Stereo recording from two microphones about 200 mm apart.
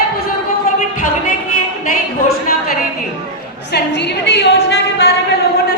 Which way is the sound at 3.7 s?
60° left (ahead or behind).